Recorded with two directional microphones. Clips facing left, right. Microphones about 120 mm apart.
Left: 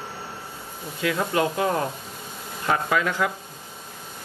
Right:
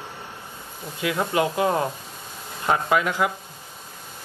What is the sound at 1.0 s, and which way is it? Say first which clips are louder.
Speech: even; 20° right (ahead or behind).